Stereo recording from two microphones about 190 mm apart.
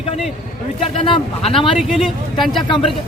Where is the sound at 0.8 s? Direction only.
30° left (ahead or behind).